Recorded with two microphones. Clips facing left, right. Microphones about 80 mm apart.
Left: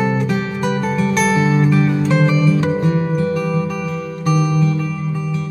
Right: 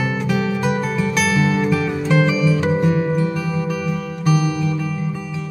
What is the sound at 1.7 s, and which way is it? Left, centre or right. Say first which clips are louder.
Music: left 2 dB; centre.